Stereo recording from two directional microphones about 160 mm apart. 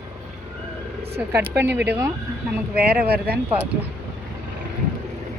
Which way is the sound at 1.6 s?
90° right.